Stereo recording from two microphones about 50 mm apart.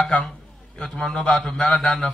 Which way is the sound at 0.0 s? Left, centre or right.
Centre.